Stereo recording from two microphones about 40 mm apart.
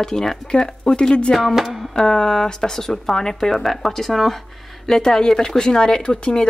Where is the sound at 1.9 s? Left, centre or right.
Centre.